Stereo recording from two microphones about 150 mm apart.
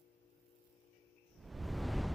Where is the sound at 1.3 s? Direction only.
Centre (ahead or behind).